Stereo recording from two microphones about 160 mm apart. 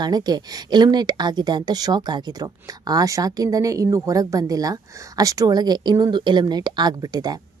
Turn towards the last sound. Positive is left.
turn(degrees=-25)  # may be behind; listen again after turning